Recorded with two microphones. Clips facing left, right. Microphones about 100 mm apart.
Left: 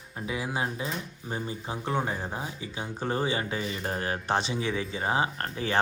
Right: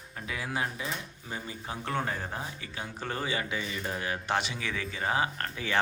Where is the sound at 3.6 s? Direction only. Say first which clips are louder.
Left 3 dB; 40° left (ahead or behind).